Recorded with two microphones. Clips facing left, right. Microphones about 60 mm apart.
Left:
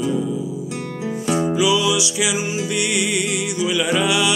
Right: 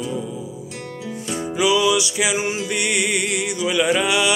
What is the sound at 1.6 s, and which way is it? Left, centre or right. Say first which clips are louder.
Music: right 6 dB; right.